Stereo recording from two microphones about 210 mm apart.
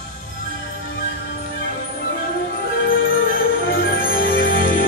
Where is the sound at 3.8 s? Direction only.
45° left (ahead or behind).